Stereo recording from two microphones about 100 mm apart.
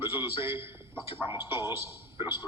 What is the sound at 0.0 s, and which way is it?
A man's voice, 25° right (ahead or behind).